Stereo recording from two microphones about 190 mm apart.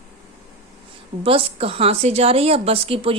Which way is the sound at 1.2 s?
30° right (ahead or behind).